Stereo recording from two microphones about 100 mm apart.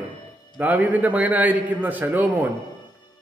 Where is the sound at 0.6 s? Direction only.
15° right (ahead or behind).